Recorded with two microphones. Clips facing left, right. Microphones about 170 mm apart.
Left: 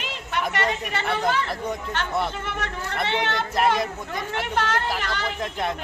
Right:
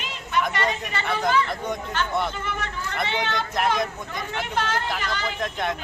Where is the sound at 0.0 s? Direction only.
70° left (ahead or behind).